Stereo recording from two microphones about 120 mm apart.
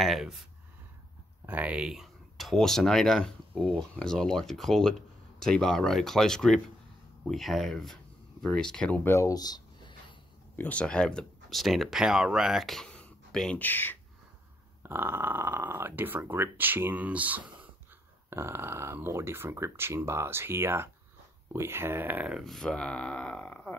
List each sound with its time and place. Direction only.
0.0 s speech: centre (ahead or behind)
1.4 s speech: 15° right (ahead or behind); by 9.9 s 35° left (ahead or behind)
10.5 s speech: 15° left (ahead or behind)
14.8 s speech: 20° right (ahead or behind)
22.4 s speech: 5° left (ahead or behind)